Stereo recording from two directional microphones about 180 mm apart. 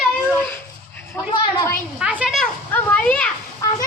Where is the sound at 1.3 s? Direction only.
20° left (ahead or behind).